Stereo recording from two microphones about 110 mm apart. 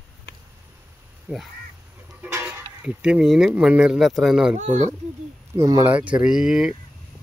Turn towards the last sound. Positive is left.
turn(degrees=-5)  # may be behind; listen again after turning